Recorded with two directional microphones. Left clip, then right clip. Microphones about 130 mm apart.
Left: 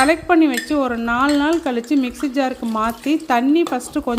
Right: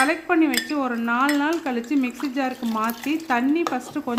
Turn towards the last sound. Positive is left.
turn(degrees=40)  # may be behind; listen again after turning